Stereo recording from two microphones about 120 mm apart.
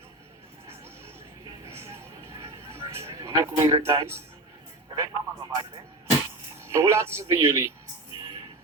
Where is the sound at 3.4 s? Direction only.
25° right (ahead or behind).